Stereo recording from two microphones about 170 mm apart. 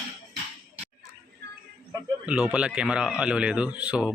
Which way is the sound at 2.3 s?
5° right (ahead or behind).